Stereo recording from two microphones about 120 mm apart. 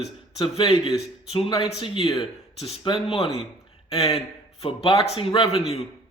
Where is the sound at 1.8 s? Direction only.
45° left (ahead or behind).